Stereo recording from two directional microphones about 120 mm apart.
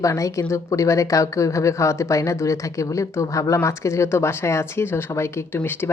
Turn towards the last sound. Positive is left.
turn(degrees=20)  # may be behind; listen again after turning